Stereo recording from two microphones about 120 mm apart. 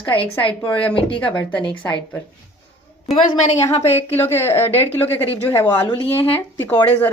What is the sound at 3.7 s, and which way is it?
Speech, 60° left (ahead or behind).